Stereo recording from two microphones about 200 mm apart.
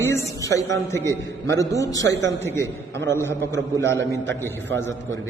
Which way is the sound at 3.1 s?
15° left (ahead or behind).